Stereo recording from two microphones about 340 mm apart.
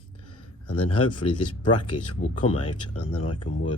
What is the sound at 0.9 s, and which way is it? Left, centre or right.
Speech, left.